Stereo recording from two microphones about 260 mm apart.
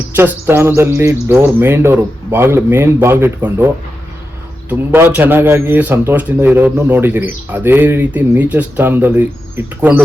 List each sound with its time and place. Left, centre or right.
0.2 s a man's voice: centre
4.7 s a man's voice: centre